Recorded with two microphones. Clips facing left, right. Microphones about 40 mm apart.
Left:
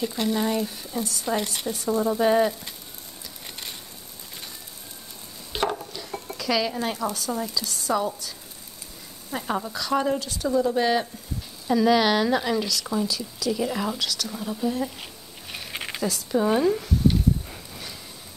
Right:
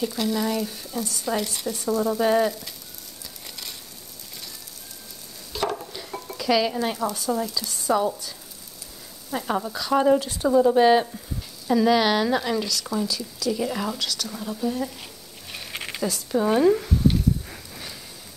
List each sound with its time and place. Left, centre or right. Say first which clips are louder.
0.1 s speech: even; left
2.1 s frying: left 1 dB; centre
3.4 s a sound: left 1 dB; left
5.5 s a sound: left 1 dB; left
6.3 s stir: right 3 dB; centre
7.2 s speech: right 2 dB; centre
9.3 s speech: right 2 dB; centre
10.1 s speech: right 5 dB; right
10.6 s speech: right 6 dB; centre
11.6 s speech: even; centre
15.5 s zipper: even; centre